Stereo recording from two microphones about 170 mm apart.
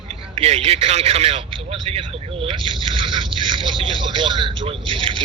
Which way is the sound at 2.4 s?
30° right (ahead or behind).